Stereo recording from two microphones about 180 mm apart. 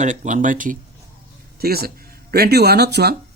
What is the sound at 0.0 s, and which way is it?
Speech, 45° right (ahead or behind).